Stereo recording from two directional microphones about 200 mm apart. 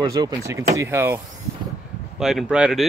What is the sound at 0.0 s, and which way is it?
Speech, 20° right (ahead or behind).